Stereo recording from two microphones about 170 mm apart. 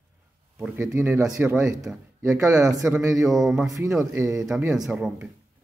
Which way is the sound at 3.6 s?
20° right (ahead or behind).